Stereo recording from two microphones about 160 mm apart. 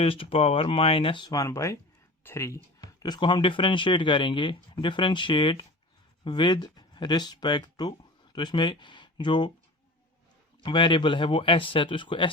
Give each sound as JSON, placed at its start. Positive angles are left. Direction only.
{"t": 0.0, "sound": "speech", "side_deg": 35}
{"t": 10.6, "sound": "speech", "side_deg": 30}